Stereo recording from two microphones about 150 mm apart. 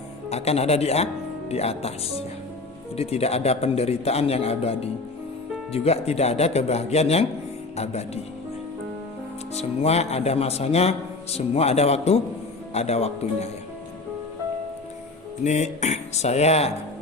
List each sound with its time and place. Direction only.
0.3 s a man's voice: 45° left (ahead or behind)
2.9 s a man's voice: 45° left (ahead or behind)
9.6 s a man's voice: 45° left (ahead or behind)
15.4 s a man's voice: 50° left (ahead or behind)